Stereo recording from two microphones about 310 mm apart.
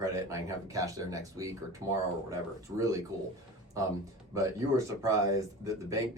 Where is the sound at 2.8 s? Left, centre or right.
Centre.